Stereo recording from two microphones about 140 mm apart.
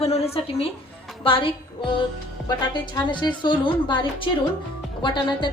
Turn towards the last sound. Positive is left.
turn(degrees=35)  # may be behind; listen again after turning